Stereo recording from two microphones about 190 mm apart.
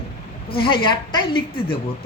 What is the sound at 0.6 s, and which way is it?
Speech, 25° left (ahead or behind).